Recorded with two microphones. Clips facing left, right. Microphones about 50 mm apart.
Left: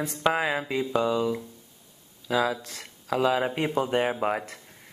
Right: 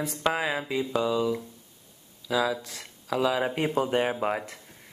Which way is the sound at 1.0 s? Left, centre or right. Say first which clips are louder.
Even; centre.